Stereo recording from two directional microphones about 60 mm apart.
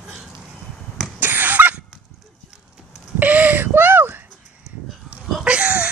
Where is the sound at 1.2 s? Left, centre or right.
Right.